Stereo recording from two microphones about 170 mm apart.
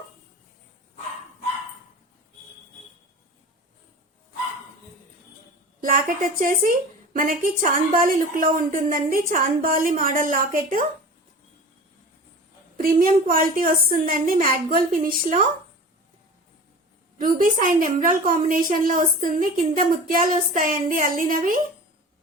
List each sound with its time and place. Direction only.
5.8 s a woman's voice: 55° right (ahead or behind)
12.7 s a woman's voice: 55° right (ahead or behind)
17.2 s a woman's voice: 55° right (ahead or behind)